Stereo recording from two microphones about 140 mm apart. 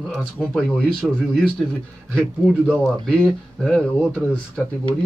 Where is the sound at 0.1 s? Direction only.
Centre (ahead or behind).